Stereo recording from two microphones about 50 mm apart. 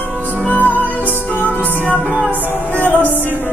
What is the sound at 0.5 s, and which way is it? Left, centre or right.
Music, left.